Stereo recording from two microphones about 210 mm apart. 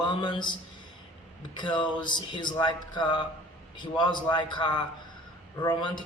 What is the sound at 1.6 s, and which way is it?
A man's voice, 20° left (ahead or behind).